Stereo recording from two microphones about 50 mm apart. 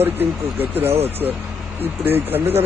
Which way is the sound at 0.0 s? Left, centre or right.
Right.